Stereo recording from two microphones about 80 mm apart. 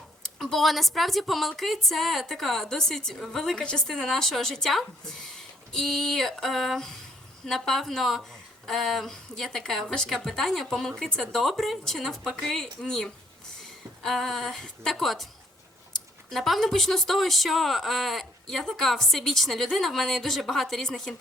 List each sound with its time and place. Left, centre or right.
0.2 s a woman's voice: centre